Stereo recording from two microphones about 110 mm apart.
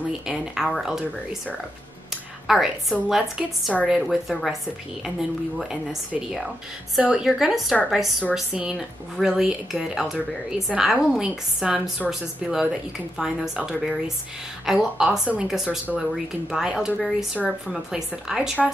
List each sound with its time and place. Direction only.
0.3 s a woman's voice: 5° right (ahead or behind)
2.4 s a woman's voice: centre (ahead or behind)
5.6 s a woman's voice: 5° right (ahead or behind)